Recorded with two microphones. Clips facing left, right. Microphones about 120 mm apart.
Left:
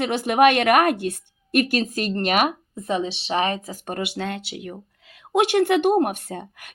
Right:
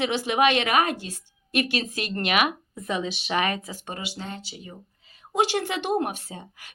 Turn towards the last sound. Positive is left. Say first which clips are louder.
# left 7 dB
turn(degrees=55)  # may be behind; listen again after turning